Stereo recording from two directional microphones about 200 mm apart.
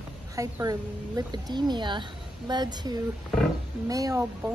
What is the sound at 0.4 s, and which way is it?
A woman's voice, 15° right (ahead or behind).